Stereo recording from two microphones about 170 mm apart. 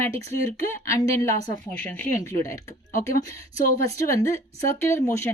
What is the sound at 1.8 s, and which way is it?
Speech, 10° left (ahead or behind).